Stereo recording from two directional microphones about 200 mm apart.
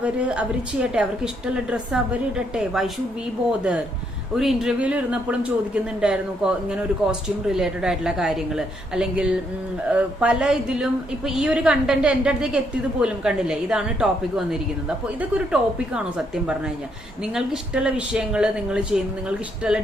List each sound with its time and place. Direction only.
0.0 s speech: 5° right (ahead or behind)